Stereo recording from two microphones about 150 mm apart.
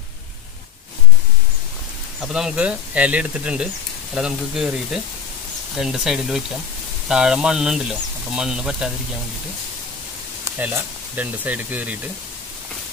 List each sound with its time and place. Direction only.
2.2 s speech: 5° right (ahead or behind)
10.6 s speech: 15° right (ahead or behind)